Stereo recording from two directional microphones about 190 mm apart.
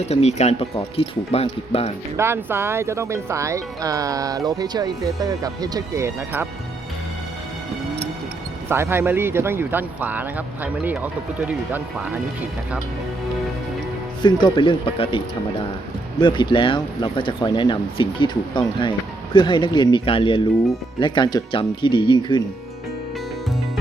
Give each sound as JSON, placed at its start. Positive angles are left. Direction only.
{"t": 0.0, "sound": "speech", "side_deg": 35}
{"t": 2.1, "sound": "speech", "side_deg": -15}
{"t": 8.7, "sound": "speech", "side_deg": -10}
{"t": 14.2, "sound": "speech", "side_deg": 25}
{"t": 16.2, "sound": "speech", "side_deg": 25}